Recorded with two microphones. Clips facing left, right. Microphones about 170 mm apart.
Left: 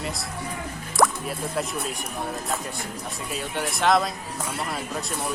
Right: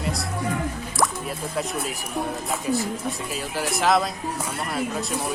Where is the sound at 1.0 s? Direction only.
55° left (ahead or behind).